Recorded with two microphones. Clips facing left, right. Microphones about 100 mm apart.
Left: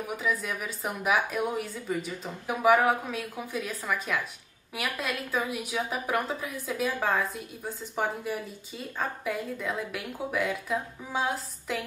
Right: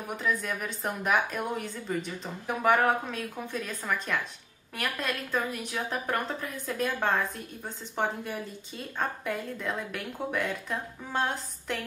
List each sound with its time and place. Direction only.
0.0 s a woman's voice: 5° left (ahead or behind)